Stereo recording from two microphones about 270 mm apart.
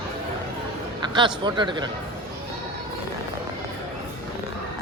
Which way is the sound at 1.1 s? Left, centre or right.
Centre.